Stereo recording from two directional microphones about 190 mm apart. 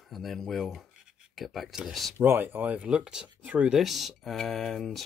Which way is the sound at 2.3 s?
10° right (ahead or behind).